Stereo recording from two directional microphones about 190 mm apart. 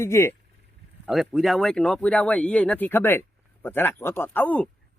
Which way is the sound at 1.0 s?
Centre (ahead or behind).